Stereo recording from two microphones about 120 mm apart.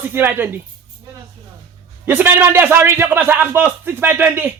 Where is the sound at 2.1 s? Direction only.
15° right (ahead or behind).